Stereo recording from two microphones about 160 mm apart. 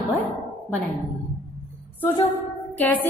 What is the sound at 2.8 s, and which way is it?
Speech, 10° left (ahead or behind).